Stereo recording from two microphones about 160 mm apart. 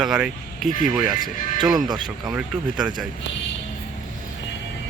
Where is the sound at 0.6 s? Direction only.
55° left (ahead or behind).